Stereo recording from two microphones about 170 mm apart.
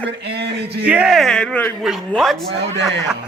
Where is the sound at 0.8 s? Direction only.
5° right (ahead or behind).